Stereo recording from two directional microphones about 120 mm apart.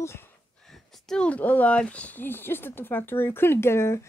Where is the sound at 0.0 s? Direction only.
20° left (ahead or behind).